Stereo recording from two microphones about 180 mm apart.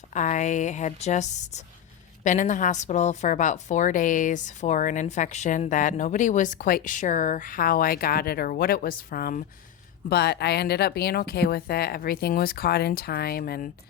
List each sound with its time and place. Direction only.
0.1 s a woman's voice: 40° left (ahead or behind)
10.1 s speech: 65° left (ahead or behind)